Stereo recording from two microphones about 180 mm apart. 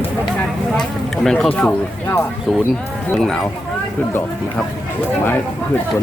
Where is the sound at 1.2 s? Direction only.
5° left (ahead or behind).